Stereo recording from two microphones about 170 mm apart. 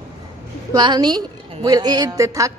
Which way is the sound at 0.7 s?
25° right (ahead or behind).